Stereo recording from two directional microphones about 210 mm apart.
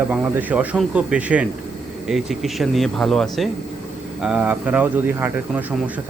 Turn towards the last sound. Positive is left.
turn(degrees=-10)  # may be behind; listen again after turning